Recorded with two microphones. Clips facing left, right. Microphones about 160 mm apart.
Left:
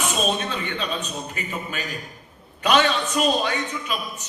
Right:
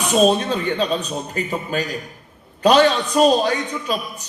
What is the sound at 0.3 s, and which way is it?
A man's voice, 40° right (ahead or behind).